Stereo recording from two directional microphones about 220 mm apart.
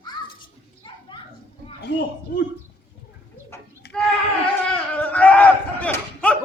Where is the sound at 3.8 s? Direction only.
50° left (ahead or behind).